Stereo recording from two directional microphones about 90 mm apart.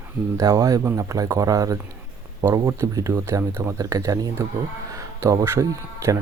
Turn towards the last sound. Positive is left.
turn(degrees=-35)  # may be behind; listen again after turning